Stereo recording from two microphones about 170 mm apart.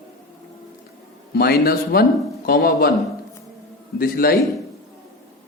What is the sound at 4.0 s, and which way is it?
Speech, 60° left (ahead or behind).